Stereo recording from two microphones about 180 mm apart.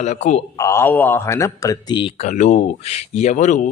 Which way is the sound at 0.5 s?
15° left (ahead or behind).